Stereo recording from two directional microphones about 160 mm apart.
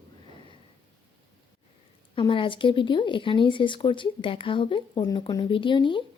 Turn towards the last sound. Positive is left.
turn(degrees=30)  # may be behind; listen again after turning